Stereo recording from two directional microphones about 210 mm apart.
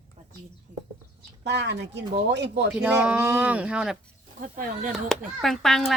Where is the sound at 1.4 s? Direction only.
55° right (ahead or behind).